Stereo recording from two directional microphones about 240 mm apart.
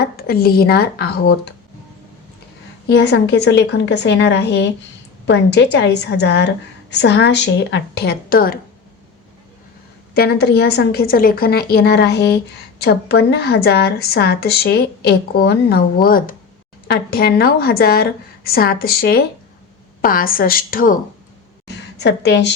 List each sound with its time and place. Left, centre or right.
0.0 s a woman's voice: left
2.9 s a woman's voice: left
10.2 s a woman's voice: left